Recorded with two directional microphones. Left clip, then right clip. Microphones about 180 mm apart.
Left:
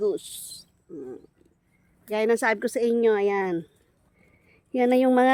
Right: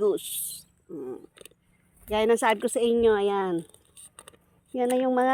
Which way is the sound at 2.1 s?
15° left (ahead or behind).